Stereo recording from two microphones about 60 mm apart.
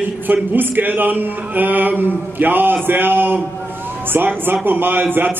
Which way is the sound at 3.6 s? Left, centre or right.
Right.